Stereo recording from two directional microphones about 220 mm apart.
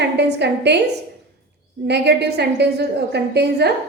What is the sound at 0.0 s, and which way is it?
Speech, 50° right (ahead or behind).